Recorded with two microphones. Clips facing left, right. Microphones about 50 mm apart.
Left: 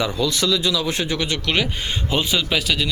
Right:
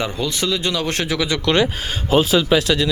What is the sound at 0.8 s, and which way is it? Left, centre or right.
Speech, right.